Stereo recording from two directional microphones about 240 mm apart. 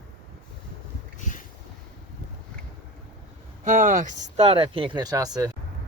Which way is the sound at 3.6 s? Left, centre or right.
Right.